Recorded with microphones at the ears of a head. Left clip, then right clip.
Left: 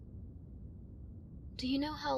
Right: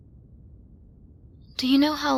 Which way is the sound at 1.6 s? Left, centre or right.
Right.